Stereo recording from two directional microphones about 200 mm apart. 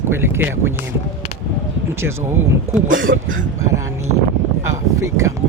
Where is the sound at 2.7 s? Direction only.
15° right (ahead or behind).